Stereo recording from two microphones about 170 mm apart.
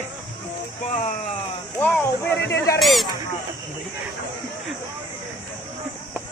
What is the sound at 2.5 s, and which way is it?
Speech, 20° left (ahead or behind).